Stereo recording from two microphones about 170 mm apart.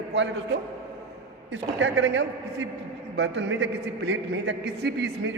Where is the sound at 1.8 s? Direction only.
90° right.